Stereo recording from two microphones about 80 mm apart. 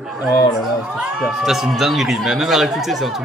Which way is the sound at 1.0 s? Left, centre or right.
Centre.